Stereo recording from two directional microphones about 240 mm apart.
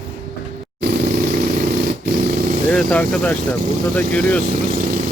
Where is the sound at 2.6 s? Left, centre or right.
Centre.